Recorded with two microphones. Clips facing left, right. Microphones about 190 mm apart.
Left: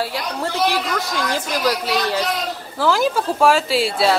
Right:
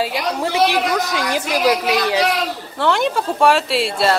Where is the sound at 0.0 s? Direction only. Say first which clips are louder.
Right 3 dB; 15° right (ahead or behind).